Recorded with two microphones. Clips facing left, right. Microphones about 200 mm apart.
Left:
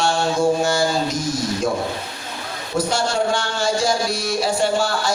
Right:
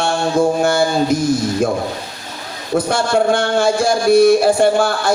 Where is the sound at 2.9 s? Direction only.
55° right (ahead or behind).